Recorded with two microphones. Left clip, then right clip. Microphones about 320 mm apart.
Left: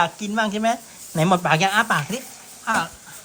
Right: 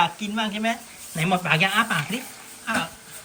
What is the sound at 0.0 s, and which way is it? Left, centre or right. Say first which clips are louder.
Speech: left 2 dB; centre.